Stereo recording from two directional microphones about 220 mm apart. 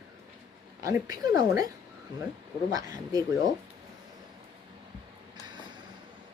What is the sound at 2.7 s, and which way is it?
Speech, 15° right (ahead or behind).